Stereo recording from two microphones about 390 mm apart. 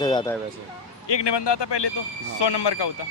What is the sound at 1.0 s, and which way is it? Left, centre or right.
Speech, left.